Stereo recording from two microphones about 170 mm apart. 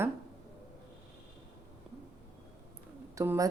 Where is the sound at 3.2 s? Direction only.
20° right (ahead or behind).